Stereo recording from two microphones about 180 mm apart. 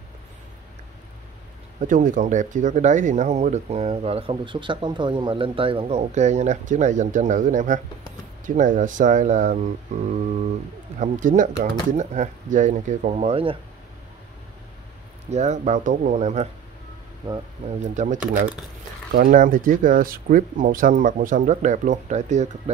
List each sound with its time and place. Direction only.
1.8 s speech: 45° right (ahead or behind)
15.2 s speech: 40° right (ahead or behind)
17.6 s speech: 40° right (ahead or behind)